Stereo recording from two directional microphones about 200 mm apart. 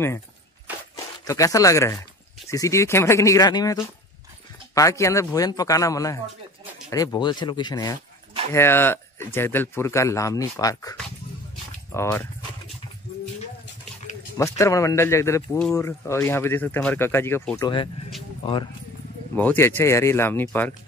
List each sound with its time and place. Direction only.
1.2 s speech: 15° left (ahead or behind)
14.3 s speech: 15° left (ahead or behind)
19.3 s speech: 10° left (ahead or behind)